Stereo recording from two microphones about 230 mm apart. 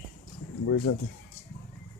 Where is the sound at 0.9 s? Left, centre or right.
Left.